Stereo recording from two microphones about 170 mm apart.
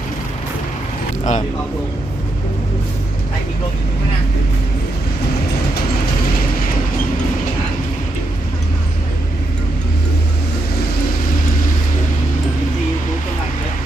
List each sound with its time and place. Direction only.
1.2 s speech: 45° left (ahead or behind)